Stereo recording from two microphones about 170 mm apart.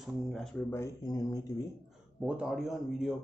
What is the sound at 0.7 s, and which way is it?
Speech, 20° left (ahead or behind).